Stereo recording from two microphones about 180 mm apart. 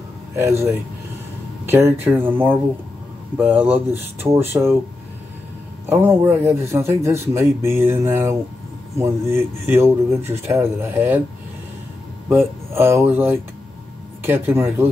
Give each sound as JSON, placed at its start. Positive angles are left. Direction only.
{"t": 0.4, "sound": "speech", "side_deg": -15}
{"t": 5.9, "sound": "speech", "side_deg": -15}
{"t": 12.3, "sound": "speech", "side_deg": -10}